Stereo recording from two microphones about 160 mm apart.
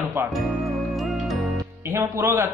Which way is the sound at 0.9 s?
Centre (ahead or behind).